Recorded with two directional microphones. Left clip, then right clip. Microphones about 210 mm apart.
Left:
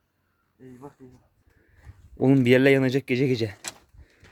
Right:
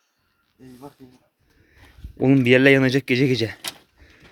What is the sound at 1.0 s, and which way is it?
Speech, 45° right (ahead or behind).